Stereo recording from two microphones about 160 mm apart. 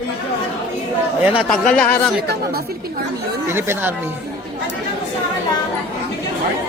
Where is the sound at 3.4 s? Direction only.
15° right (ahead or behind).